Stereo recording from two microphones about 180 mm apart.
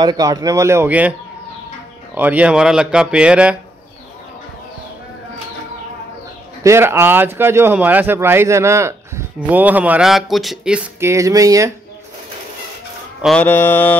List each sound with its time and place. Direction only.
0.0 s speech: 20° right (ahead or behind)
2.1 s speech: 10° right (ahead or behind)
6.6 s speech: 15° right (ahead or behind)
13.2 s mantra: 5° left (ahead or behind)